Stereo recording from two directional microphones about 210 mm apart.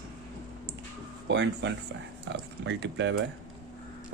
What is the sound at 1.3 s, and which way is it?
Speech, 60° right (ahead or behind).